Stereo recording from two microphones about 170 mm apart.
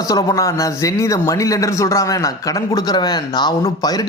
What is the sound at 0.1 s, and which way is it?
Speech, 20° left (ahead or behind).